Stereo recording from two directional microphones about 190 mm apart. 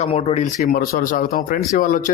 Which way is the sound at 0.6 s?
50° left (ahead or behind).